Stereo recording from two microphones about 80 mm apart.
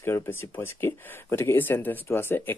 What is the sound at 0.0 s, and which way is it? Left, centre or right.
Speech, left.